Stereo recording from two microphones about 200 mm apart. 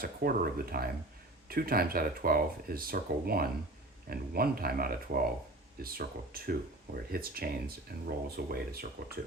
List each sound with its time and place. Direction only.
0.0 s speech: 50° right (ahead or behind)